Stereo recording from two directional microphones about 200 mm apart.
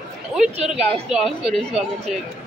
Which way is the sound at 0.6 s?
Centre (ahead or behind).